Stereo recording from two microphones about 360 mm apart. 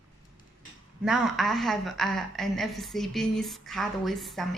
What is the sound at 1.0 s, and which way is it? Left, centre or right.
A woman's voice, centre.